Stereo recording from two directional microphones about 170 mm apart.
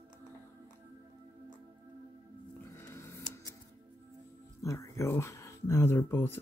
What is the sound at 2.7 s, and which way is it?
Music, 15° left (ahead or behind).